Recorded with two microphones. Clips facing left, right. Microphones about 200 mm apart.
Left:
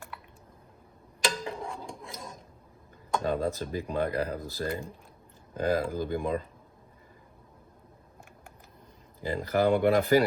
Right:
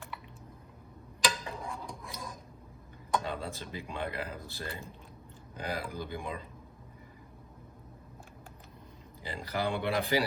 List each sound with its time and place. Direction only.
1.5 s a sound: 30° left (ahead or behind)
3.2 s speech: 45° left (ahead or behind)
9.2 s speech: 50° left (ahead or behind)